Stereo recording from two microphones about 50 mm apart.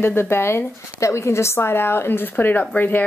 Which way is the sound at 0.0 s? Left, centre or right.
Left.